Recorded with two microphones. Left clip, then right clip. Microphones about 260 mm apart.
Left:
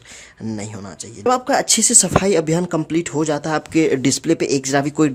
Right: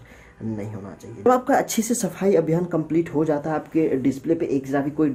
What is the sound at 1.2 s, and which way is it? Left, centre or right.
Speech, left.